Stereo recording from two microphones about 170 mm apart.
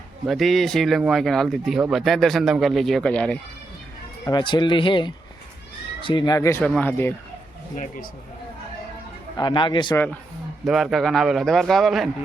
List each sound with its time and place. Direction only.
0.3 s speech: centre (ahead or behind)
4.3 s speech: 25° left (ahead or behind); by 7.1 s 10° left (ahead or behind)
7.8 s a man's voice: 55° left (ahead or behind)
9.4 s speech: 25° left (ahead or behind)
9.9 s speech: 10° left (ahead or behind)
10.7 s speech: centre (ahead or behind)